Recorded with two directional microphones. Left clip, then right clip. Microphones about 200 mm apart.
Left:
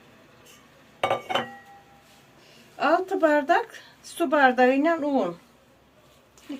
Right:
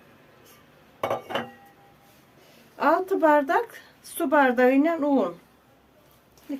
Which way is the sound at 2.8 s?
55° right (ahead or behind).